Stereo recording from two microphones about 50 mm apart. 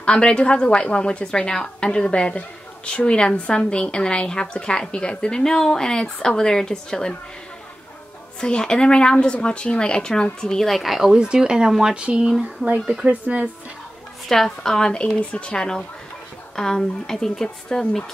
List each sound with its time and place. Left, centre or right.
0.0 s a woman's voice: centre
8.4 s a woman's voice: centre
10.7 s speech: centre
11.1 s speech: centre
13.0 s speech: right
14.3 s speech: centre